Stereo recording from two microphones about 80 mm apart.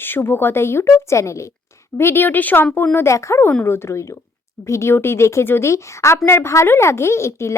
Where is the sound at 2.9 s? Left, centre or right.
Left.